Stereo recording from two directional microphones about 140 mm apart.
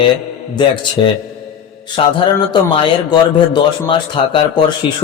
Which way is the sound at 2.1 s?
35° left (ahead or behind).